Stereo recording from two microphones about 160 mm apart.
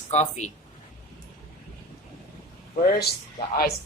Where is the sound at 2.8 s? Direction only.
85° left.